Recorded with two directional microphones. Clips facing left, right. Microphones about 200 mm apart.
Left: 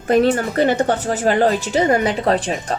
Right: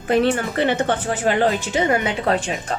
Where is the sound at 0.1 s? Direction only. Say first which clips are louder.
Left 3 dB; 40° left (ahead or behind).